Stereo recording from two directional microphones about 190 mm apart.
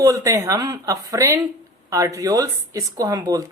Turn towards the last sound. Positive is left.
turn(degrees=-20)  # may be behind; listen again after turning